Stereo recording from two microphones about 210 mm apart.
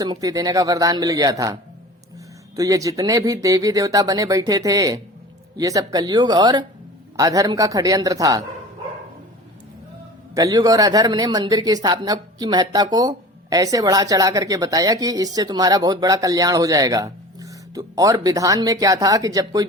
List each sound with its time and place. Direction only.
0.0 s speech: 15° right (ahead or behind)
2.6 s speech: 15° right (ahead or behind)
10.3 s speech: 15° right (ahead or behind)